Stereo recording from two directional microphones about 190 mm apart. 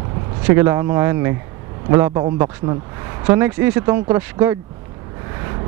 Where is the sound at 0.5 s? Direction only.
15° right (ahead or behind).